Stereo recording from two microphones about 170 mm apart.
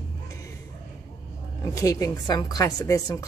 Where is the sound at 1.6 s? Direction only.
20° left (ahead or behind).